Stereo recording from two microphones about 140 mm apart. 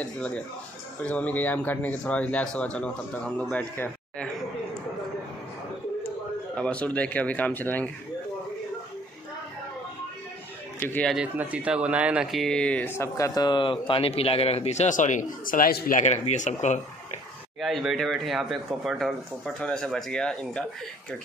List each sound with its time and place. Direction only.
0.0 s speech: 10° left (ahead or behind)
6.5 s speech: 10° left (ahead or behind)
10.8 s speech: 15° left (ahead or behind)
11.3 s speech: 10° right (ahead or behind); by 16.8 s 55° left (ahead or behind)
17.6 s speech: centre (ahead or behind)